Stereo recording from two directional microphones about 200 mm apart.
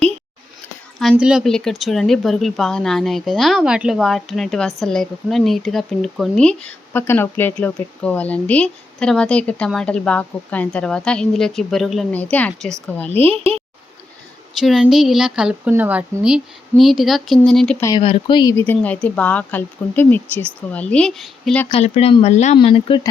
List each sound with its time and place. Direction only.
1.1 s speech: 5° right (ahead or behind)
13.1 s speech: 30° right (ahead or behind)
14.6 s speech: centre (ahead or behind)
17.8 s speech: 25° left (ahead or behind)
18.6 s speech: 5° left (ahead or behind)
21.7 s speech: 30° left (ahead or behind)